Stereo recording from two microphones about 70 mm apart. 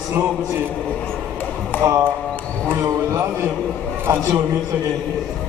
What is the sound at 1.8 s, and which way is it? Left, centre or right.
A man's voice, right.